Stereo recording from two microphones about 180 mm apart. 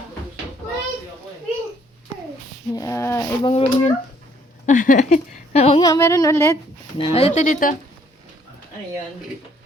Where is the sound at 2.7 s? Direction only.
20° left (ahead or behind).